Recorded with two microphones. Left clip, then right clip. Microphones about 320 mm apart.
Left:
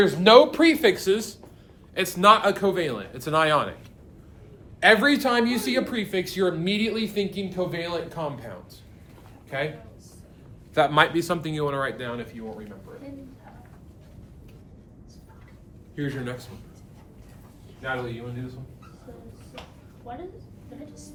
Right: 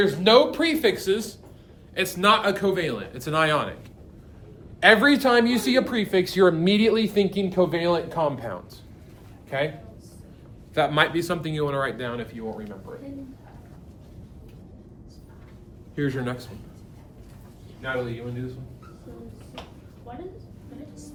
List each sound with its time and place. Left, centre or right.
0.0 s speech: left
4.8 s speech: centre; by 8.5 s right
9.5 s speech: centre
10.8 s speech: centre
16.0 s speech: centre